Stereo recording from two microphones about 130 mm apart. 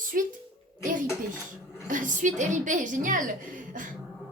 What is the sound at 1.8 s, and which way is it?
A woman's voice, 90° right.